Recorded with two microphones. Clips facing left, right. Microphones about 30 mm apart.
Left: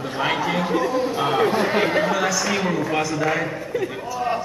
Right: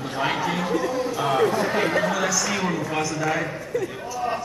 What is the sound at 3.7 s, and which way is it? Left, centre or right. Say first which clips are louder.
Speech: left 2 dB; left.